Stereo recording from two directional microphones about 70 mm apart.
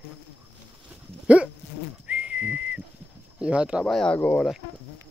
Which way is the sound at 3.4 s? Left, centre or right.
Centre.